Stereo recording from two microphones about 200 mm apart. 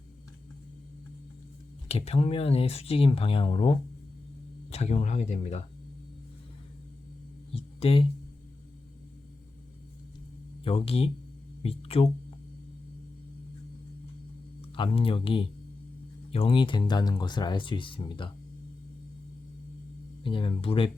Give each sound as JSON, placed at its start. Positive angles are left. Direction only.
{"t": 1.9, "sound": "speech", "side_deg": 30}
{"t": 7.5, "sound": "a sound", "side_deg": 30}
{"t": 10.6, "sound": "speech", "side_deg": 30}
{"t": 14.8, "sound": "speech", "side_deg": 25}
{"t": 20.2, "sound": "speech", "side_deg": 25}